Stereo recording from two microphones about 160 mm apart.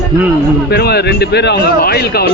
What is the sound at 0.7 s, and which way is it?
Speech, 90° left.